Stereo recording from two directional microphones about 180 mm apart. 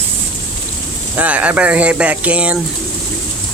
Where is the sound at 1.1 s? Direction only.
10° right (ahead or behind).